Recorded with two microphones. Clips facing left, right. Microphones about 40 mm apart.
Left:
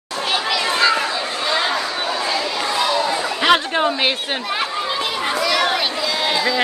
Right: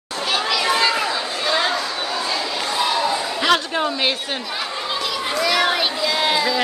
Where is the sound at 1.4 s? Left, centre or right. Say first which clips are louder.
Even; centre.